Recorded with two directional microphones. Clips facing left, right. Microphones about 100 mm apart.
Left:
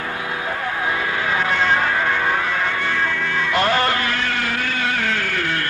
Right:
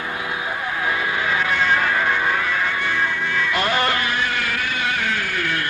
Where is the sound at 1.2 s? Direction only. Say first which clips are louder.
Left 2 dB; 40° left (ahead or behind).